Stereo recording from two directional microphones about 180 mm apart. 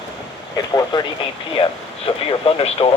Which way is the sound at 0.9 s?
25° left (ahead or behind).